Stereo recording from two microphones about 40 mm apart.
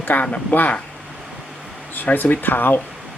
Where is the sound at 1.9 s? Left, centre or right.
Left.